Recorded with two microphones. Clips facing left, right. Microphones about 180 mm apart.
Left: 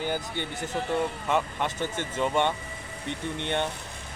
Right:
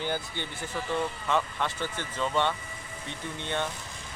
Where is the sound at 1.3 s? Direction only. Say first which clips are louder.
Right 1 dB; 15° left (ahead or behind).